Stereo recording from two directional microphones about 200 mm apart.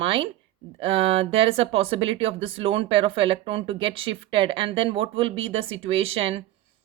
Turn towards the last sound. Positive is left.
turn(degrees=-30)  # may be behind; listen again after turning